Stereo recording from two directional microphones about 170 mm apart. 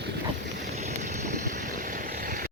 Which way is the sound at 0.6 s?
45° right (ahead or behind).